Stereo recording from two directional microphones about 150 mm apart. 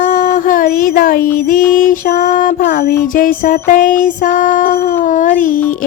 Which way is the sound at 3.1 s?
65° left (ahead or behind).